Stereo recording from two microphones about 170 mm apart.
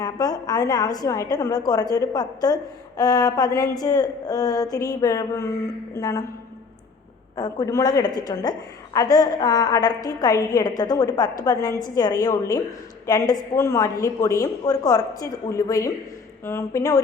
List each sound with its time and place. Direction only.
0.0 s a woman's voice: 20° left (ahead or behind)
7.3 s a woman's voice: 20° left (ahead or behind)